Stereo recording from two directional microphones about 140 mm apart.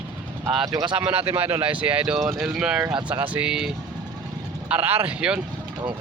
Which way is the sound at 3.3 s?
5° right (ahead or behind).